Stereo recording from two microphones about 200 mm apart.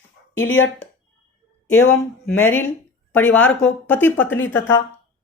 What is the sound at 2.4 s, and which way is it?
A woman's voice, 10° left (ahead or behind).